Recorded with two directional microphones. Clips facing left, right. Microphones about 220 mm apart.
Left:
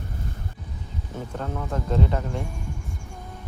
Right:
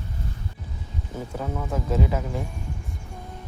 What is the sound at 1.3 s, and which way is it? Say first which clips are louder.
Speech: right 1 dB; 5° right (ahead or behind).